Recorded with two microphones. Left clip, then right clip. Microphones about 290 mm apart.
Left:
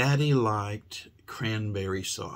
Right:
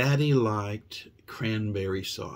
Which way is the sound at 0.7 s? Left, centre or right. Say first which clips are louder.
Right 1 dB; left.